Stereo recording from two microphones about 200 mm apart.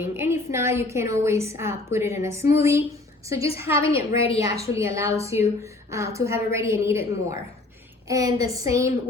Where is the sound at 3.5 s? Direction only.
10° right (ahead or behind).